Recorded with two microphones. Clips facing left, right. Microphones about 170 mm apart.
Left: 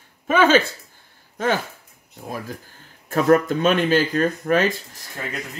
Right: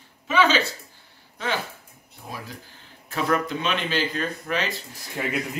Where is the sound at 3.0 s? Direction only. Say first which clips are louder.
Left 8 dB; 45° left (ahead or behind).